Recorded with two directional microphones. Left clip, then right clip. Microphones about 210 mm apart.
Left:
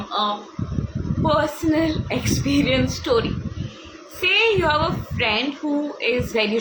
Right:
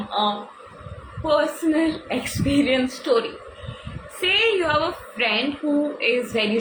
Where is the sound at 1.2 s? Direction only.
15° left (ahead or behind).